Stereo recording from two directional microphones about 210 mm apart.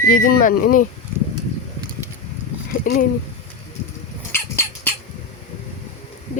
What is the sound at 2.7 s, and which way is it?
Speech, 50° left (ahead or behind).